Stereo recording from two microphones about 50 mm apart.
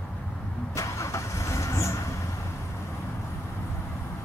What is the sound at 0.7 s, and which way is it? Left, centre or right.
Vehicle, left.